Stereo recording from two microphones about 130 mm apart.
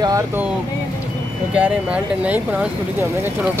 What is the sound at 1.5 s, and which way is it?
Speech, 10° right (ahead or behind).